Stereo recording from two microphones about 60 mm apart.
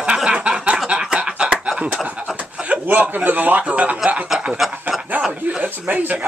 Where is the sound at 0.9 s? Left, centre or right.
Centre.